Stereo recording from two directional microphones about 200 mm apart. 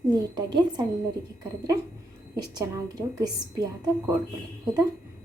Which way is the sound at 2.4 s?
20° right (ahead or behind).